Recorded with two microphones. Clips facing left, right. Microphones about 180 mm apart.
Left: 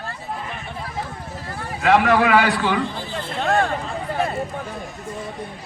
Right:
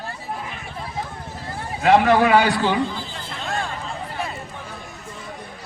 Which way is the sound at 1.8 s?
30° right (ahead or behind).